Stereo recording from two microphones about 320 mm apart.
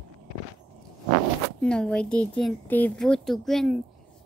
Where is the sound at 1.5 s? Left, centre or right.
Centre.